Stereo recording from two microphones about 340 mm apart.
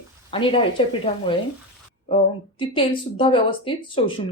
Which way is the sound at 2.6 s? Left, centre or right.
Centre.